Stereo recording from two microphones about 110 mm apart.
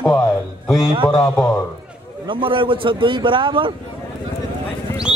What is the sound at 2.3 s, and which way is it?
A man's voice, 50° right (ahead or behind).